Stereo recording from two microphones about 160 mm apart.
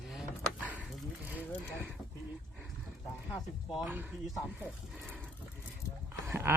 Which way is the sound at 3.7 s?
10° right (ahead or behind).